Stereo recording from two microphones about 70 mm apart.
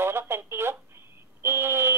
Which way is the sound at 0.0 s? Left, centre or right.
Right.